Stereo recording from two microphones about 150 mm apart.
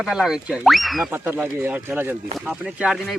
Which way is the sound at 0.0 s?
5° right (ahead or behind).